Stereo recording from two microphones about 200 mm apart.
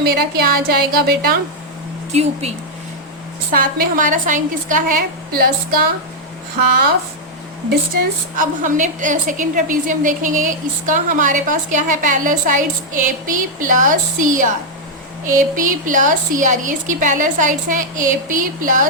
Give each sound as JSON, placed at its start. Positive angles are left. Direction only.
{"t": 0.0, "sound": "a woman's voice", "side_deg": -50}
{"t": 3.5, "sound": "a woman's voice", "side_deg": -45}
{"t": 7.7, "sound": "a woman's voice", "side_deg": -45}